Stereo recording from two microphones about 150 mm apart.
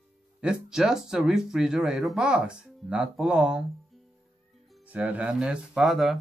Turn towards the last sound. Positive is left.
turn(degrees=0)  # may be behind; listen again after turning